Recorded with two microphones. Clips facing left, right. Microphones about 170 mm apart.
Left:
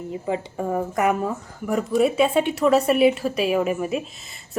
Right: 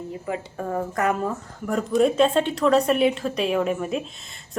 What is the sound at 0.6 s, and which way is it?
Speech, 10° left (ahead or behind).